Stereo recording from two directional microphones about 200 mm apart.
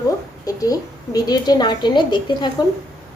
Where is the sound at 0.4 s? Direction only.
15° left (ahead or behind).